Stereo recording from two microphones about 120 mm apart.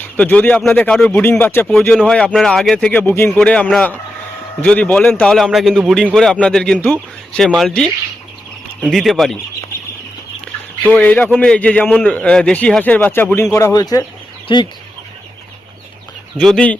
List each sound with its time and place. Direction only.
0.0 s a man's voice: 15° left (ahead or behind)
1.2 s a man's voice: 15° left (ahead or behind); by 9.4 s centre (ahead or behind)
10.8 s a man's voice: 10° left (ahead or behind); by 14.7 s 40° left (ahead or behind)
16.4 s a man's voice: 5° left (ahead or behind)